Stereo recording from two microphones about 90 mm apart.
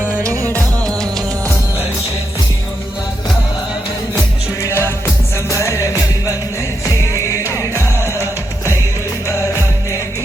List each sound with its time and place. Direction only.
0.2 s music: 40° right (ahead or behind)
4.6 s music: 30° left (ahead or behind)